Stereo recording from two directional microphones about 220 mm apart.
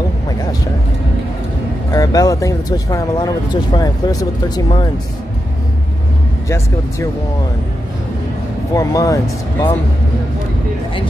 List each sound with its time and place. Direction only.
1.9 s speech: 15° left (ahead or behind)
8.7 s speech: 15° left (ahead or behind)